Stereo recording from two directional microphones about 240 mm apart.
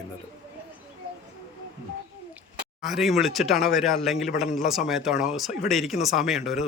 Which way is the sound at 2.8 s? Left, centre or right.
Centre.